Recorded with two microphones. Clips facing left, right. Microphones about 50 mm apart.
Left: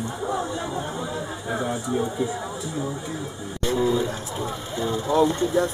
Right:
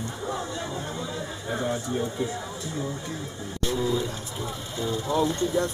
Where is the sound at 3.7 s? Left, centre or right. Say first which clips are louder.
Left 5 dB; centre.